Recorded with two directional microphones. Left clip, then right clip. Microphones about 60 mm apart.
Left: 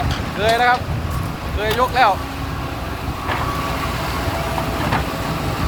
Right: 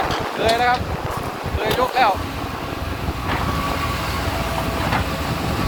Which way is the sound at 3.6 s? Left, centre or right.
Right.